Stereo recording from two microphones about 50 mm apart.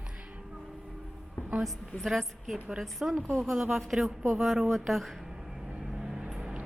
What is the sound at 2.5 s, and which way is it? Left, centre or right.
Speech, centre.